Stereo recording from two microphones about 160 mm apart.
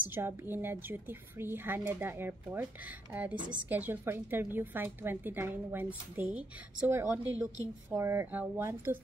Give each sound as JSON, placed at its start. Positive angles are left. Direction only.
{"t": 0.1, "sound": "a woman's voice", "side_deg": -15}